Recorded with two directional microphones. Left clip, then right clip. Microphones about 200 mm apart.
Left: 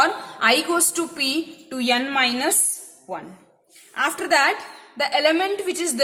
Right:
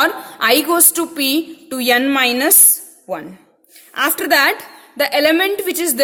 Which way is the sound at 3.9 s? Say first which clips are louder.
Right 5 dB; 45° right (ahead or behind).